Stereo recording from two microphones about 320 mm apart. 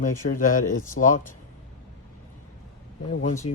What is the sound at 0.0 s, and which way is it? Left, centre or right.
Speech, left.